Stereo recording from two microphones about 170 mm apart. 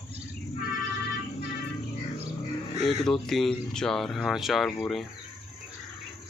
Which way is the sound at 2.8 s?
Centre (ahead or behind).